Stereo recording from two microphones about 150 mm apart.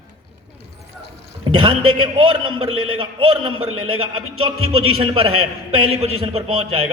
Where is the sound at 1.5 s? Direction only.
35° right (ahead or behind).